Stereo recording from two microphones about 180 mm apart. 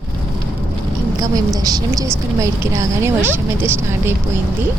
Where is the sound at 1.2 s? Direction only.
20° right (ahead or behind).